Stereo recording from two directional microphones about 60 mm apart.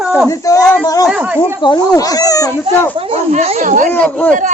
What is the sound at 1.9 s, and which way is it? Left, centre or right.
Speech, left.